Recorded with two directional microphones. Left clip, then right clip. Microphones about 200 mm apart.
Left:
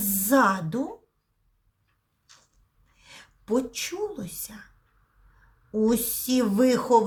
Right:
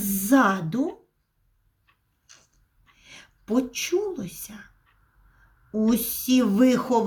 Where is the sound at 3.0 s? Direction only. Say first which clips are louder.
Right 1 dB; 20° left (ahead or behind).